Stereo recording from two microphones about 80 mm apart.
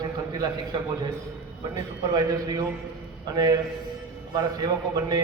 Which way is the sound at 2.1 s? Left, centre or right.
Right.